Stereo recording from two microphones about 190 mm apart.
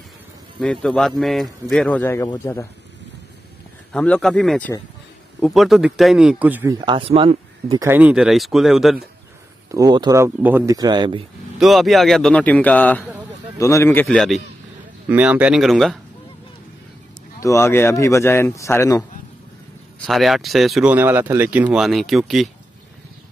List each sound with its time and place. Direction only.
0.6 s speech: 5° left (ahead or behind)
3.9 s speech: 5° left (ahead or behind); by 7.8 s 30° right (ahead or behind)
7.8 s speech: 10° right (ahead or behind)
9.7 s speech: 20° right (ahead or behind)
11.6 s a man's voice: centre (ahead or behind)
15.0 s speech: 10° right (ahead or behind)
17.4 s a man's voice: 15° left (ahead or behind)
20.1 s speech: centre (ahead or behind)